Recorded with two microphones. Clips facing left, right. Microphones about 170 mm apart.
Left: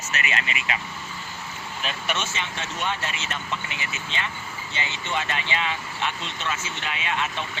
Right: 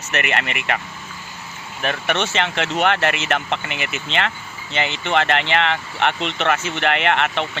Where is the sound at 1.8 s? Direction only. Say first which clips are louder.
Right 8 dB; 65° right (ahead or behind).